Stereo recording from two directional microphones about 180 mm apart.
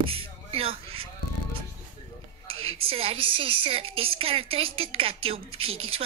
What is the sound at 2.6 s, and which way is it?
A woman's voice, 30° right (ahead or behind).